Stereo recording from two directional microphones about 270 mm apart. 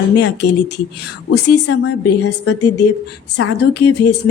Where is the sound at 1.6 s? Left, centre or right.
Left.